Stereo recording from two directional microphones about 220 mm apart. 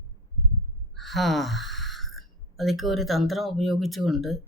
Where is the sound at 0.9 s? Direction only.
Centre (ahead or behind).